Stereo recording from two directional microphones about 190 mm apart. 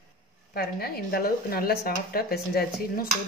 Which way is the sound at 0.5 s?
55° left (ahead or behind).